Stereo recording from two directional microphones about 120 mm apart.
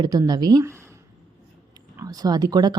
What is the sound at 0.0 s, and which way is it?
Speech, 35° right (ahead or behind).